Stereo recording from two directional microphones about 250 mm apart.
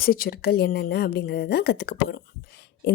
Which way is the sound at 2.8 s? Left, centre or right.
Left.